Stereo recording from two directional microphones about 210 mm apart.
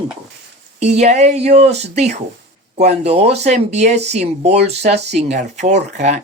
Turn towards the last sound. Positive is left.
turn(degrees=-35)  # may be behind; listen again after turning